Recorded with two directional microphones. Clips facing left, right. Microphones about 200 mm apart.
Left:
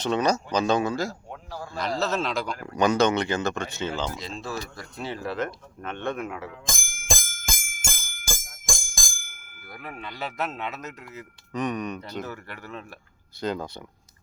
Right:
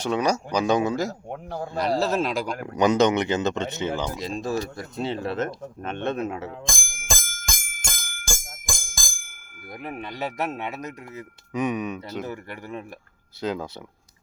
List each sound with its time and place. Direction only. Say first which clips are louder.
0.0 s speech: even; 10° right (ahead or behind)
1.3 s speech: right 6 dB; 55° right (ahead or behind)
1.7 s a man's voice: right 5 dB; 35° right (ahead or behind)
2.1 s speech: right 3 dB; 10° right (ahead or behind); by 6.6 s 30° right (ahead or behind)
6.7 s bicycle bell: even; centre (ahead or behind)
9.7 s speech: right 4 dB; 20° right (ahead or behind)
13.4 s speech: right 1 dB; 5° right (ahead or behind)